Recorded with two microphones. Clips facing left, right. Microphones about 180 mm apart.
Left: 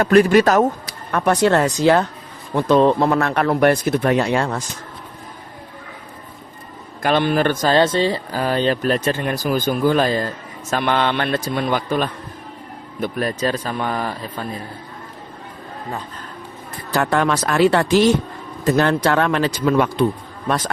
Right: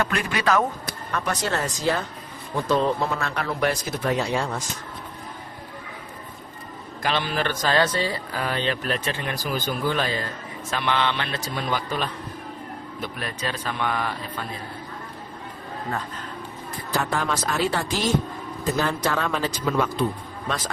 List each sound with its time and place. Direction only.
0.0 s a man's voice: 40° left (ahead or behind)
1.1 s a man's voice: 60° left (ahead or behind)
7.0 s a man's voice: 55° left (ahead or behind)
7.7 s a man's voice: 25° left (ahead or behind)
16.9 s a man's voice: 65° left (ahead or behind)